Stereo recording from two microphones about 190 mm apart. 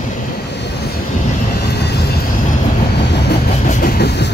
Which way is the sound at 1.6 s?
60° left (ahead or behind).